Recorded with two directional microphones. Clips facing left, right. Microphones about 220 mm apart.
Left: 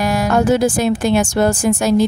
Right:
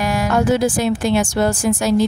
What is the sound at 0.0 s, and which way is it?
A woman's voice, 40° left (ahead or behind).